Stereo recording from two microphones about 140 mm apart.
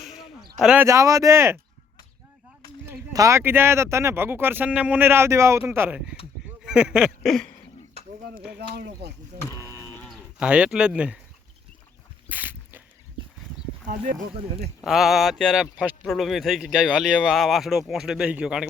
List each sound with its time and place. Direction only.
0.0 s a sound: centre (ahead or behind)
0.6 s speech: 10° right (ahead or behind)
0.9 s speech: 20° right (ahead or behind)
2.8 s speech: 20° right (ahead or behind); by 7.5 s centre (ahead or behind)
9.6 s a sound: 20° left (ahead or behind)
10.0 s livestock: 10° left (ahead or behind)
10.3 s speech: 10° right (ahead or behind)
12.3 s a sound: 15° right (ahead or behind)
13.8 s speech: 70° right (ahead or behind)
14.8 s speech: centre (ahead or behind)